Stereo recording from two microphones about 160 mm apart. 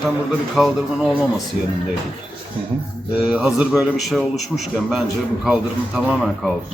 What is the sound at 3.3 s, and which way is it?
A man's voice, 5° right (ahead or behind).